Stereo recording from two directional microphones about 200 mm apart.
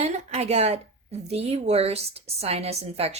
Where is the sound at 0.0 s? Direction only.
35° right (ahead or behind).